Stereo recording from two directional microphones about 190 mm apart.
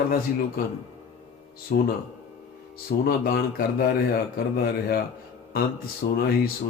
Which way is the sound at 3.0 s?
55° left (ahead or behind).